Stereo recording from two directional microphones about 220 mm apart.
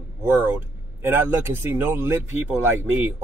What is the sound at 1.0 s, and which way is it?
Speech, 10° right (ahead or behind).